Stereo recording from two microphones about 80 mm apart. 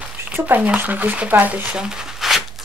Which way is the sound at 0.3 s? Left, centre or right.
Right.